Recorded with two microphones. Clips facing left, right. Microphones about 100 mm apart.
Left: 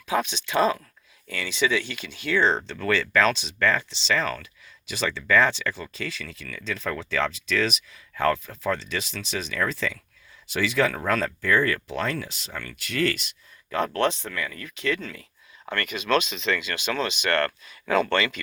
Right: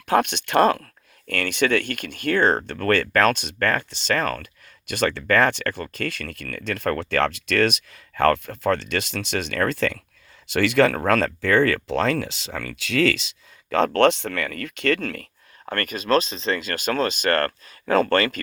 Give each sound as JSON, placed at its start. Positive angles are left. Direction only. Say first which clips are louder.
{"t": 0.1, "sound": "speech", "louder": "right 5 dB", "side_deg": -65}
{"t": 15.7, "sound": "speech", "louder": "right 3 dB", "side_deg": -45}